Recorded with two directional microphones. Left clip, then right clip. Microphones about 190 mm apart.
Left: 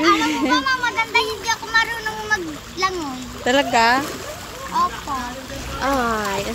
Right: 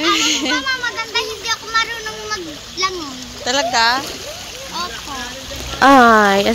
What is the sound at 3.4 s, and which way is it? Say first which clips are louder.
Speech: right 1 dB; 30° left (ahead or behind).